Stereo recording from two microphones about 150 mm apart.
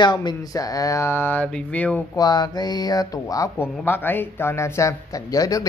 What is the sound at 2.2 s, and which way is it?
Speech, 30° left (ahead or behind).